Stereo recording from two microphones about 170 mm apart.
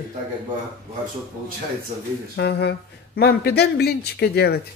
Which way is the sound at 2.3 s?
75° left (ahead or behind).